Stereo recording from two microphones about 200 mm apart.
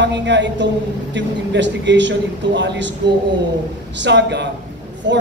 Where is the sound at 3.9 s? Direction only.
60° right (ahead or behind).